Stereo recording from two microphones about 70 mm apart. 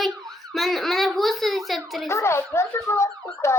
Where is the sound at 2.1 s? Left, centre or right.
Left.